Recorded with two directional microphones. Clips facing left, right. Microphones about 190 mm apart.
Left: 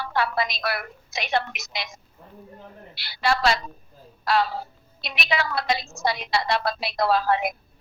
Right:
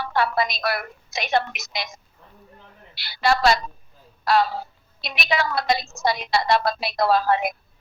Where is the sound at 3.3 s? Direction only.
45° right (ahead or behind).